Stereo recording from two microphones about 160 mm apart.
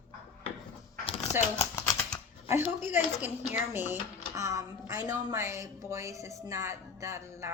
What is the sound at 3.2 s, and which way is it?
A woman's voice, 10° right (ahead or behind).